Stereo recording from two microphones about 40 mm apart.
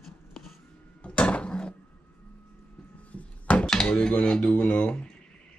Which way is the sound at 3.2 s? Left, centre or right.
Left.